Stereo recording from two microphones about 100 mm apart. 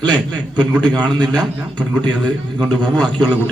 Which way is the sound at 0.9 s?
45° right (ahead or behind).